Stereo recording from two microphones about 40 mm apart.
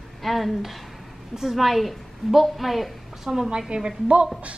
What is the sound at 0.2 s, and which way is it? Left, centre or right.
A woman's voice, centre.